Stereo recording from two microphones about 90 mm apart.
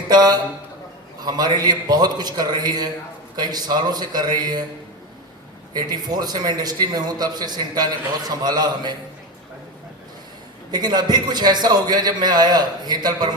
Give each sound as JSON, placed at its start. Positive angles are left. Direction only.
{"t": 0.1, "sound": "a man's voice", "side_deg": -50}
{"t": 5.7, "sound": "a man's voice", "side_deg": -50}
{"t": 10.7, "sound": "a man's voice", "side_deg": -50}